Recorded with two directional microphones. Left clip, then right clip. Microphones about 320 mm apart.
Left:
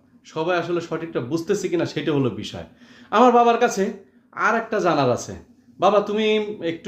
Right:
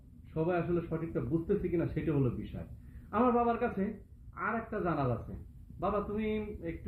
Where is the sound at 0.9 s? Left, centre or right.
Left.